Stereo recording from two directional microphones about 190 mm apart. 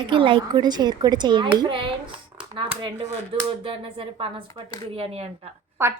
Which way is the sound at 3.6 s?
30° right (ahead or behind).